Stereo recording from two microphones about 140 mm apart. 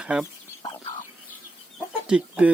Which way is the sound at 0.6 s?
30° left (ahead or behind).